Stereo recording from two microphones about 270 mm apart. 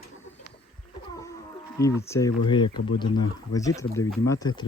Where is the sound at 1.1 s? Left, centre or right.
Centre.